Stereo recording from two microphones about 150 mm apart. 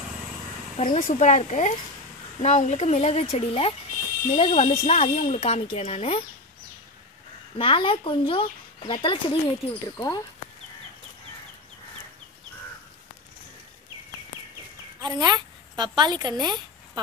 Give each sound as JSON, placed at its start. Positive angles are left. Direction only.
{"t": 0.7, "sound": "speech", "side_deg": 50}
{"t": 7.5, "sound": "speech", "side_deg": 35}
{"t": 9.9, "sound": "speech", "side_deg": 25}
{"t": 15.0, "sound": "a sound", "side_deg": -25}
{"t": 16.0, "sound": "a woman's voice", "side_deg": -30}